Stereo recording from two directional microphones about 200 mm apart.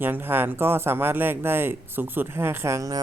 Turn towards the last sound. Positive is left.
turn(degrees=-15)  # may be behind; listen again after turning